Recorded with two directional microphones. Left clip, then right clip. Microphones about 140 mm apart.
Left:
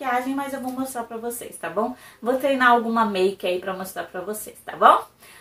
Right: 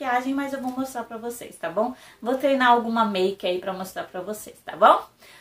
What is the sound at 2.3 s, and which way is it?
A woman's voice, 15° right (ahead or behind).